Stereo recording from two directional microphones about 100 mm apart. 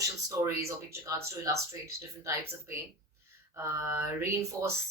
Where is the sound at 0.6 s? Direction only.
30° right (ahead or behind).